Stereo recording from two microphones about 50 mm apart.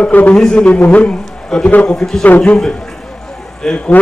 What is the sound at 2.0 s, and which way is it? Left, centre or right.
Speech, centre.